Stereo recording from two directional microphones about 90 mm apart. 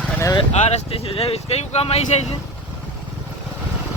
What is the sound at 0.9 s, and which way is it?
Speech, 90° left.